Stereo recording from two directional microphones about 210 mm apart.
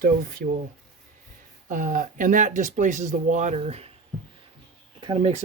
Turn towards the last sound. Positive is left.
turn(degrees=-25)  # may be behind; listen again after turning